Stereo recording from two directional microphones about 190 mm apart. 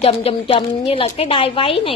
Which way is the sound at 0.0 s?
30° left (ahead or behind).